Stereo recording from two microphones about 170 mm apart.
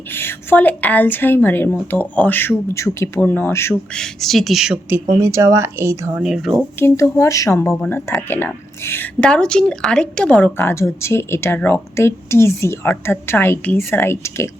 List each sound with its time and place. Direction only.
0.1 s a woman's voice: 15° left (ahead or behind)
3.9 s speech: centre (ahead or behind); by 6.2 s 15° right (ahead or behind)
6.2 s speech: centre (ahead or behind)
6.7 s a woman's voice: 15° left (ahead or behind)